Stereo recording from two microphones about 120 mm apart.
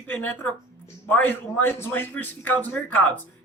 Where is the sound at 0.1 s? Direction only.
15° left (ahead or behind).